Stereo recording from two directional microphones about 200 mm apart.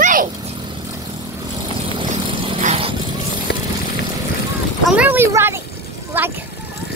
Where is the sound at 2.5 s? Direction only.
30° right (ahead or behind).